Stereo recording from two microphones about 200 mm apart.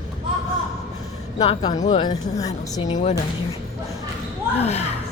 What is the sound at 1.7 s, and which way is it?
Speech, 35° left (ahead or behind).